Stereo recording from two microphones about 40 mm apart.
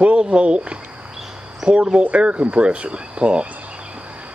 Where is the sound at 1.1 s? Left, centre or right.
Centre.